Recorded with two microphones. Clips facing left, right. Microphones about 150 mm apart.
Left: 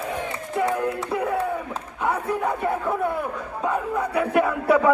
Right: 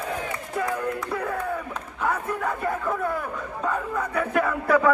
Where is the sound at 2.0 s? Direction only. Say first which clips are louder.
Left 3 dB; 15° left (ahead or behind).